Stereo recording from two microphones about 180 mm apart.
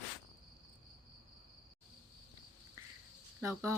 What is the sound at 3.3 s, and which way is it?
Speech, 15° right (ahead or behind).